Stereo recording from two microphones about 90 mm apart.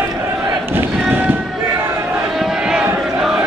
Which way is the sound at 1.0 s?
25° right (ahead or behind).